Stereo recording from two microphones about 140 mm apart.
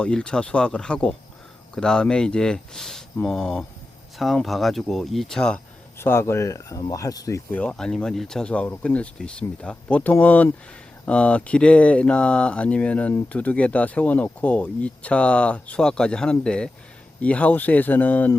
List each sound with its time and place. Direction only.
0.0 s speech: 5° left (ahead or behind)
6.0 s speech: 15° left (ahead or behind)
7.5 s speech: 5° left (ahead or behind)